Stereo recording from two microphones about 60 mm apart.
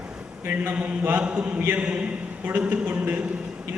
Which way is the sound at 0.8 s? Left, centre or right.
Right.